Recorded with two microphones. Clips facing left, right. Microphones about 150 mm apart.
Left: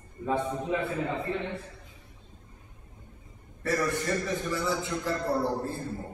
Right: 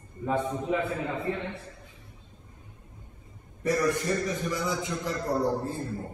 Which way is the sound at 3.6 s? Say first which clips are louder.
Right 3 dB; 15° right (ahead or behind).